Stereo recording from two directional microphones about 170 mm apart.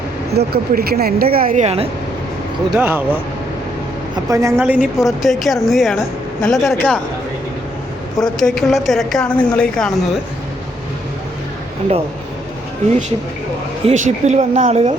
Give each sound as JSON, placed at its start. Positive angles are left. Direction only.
{"t": 0.3, "sound": "speech", "side_deg": -65}
{"t": 1.6, "sound": "speech", "side_deg": -35}
{"t": 2.6, "sound": "speech", "side_deg": -10}
{"t": 4.6, "sound": "speech", "side_deg": -5}
{"t": 8.2, "sound": "speech", "side_deg": 5}
{"t": 13.8, "sound": "speech", "side_deg": -45}